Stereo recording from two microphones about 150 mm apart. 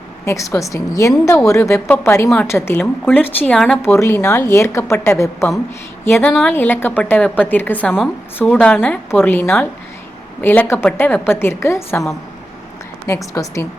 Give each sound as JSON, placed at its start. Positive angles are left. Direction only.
{"t": 0.3, "sound": "a woman's voice", "side_deg": 20}
{"t": 3.8, "sound": "a woman's voice", "side_deg": 20}
{"t": 13.3, "sound": "a woman's voice", "side_deg": 20}